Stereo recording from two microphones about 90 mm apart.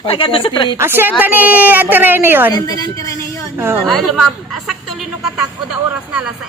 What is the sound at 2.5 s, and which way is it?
Speech, 45° left (ahead or behind).